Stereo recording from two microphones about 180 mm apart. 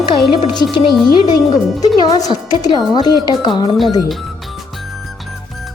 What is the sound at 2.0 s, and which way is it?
Speech, 20° left (ahead or behind).